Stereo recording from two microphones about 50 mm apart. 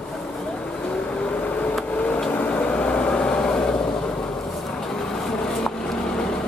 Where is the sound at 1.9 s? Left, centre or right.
Left.